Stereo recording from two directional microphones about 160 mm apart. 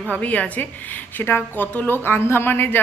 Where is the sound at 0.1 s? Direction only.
10° left (ahead or behind).